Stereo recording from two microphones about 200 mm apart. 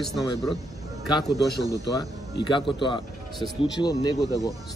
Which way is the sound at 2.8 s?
25° left (ahead or behind).